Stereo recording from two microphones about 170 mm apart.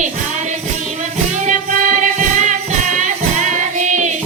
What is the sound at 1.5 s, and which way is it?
Music, 50° right (ahead or behind).